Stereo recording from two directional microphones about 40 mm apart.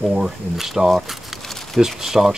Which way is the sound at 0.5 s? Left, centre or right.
Centre.